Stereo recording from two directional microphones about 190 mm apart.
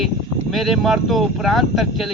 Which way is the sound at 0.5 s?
Centre (ahead or behind).